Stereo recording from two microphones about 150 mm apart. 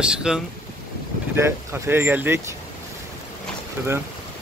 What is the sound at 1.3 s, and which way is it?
Speech, 15° right (ahead or behind).